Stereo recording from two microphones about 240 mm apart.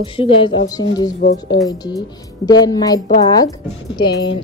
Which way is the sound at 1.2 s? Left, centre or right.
Left.